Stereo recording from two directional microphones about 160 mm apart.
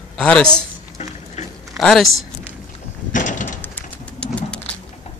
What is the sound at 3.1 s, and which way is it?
Door, 55° left (ahead or behind).